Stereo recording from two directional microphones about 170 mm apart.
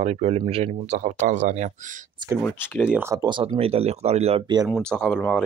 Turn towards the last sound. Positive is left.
turn(degrees=5)  # may be behind; listen again after turning